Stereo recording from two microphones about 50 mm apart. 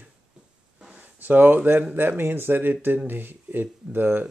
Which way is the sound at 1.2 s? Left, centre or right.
Right.